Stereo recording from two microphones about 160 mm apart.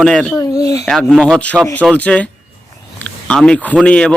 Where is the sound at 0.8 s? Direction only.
Centre (ahead or behind).